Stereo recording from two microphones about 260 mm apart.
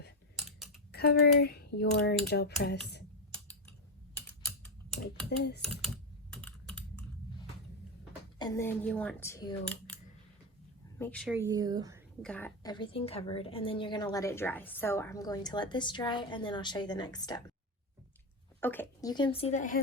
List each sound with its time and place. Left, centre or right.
0.3 s typing: centre
0.9 s speech: left
3.3 s typing: centre
5.4 s speech: left
6.3 s typing: centre
8.4 s a woman's voice: centre
10.9 s speech: centre
11.3 s speech: centre
12.2 s a woman's voice: centre
18.6 s speech: centre; by 19.8 s left